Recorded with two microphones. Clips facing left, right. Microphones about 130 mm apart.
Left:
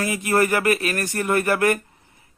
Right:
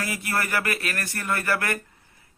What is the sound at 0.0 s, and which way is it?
Speech, 20° left (ahead or behind).